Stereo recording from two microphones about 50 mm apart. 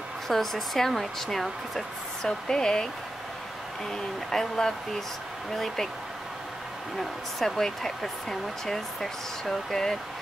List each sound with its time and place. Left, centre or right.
0.3 s speech: centre
3.9 s speech: centre
7.0 s speech: centre